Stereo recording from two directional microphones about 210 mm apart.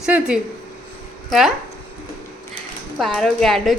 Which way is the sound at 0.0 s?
5° right (ahead or behind).